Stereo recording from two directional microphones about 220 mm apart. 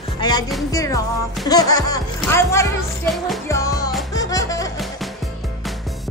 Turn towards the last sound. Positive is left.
turn(degrees=15)  # may be behind; listen again after turning